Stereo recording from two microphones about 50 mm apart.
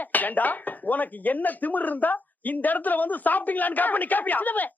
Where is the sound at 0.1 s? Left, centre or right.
Left.